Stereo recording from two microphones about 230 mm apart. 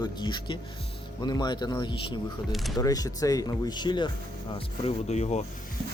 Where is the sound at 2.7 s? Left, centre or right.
Centre.